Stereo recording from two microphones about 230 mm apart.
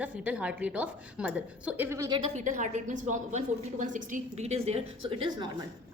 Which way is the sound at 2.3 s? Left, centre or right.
Right.